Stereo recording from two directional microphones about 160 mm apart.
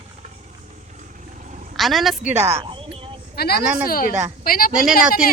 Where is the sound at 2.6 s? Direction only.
30° right (ahead or behind).